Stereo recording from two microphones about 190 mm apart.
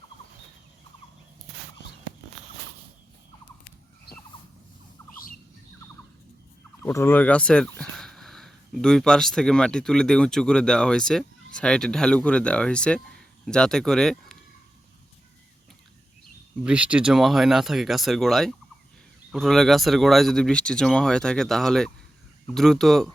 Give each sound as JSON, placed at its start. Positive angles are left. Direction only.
{"t": 4.1, "sound": "a sound", "side_deg": 55}
{"t": 6.8, "sound": "speech", "side_deg": 10}
{"t": 16.6, "sound": "speech", "side_deg": -5}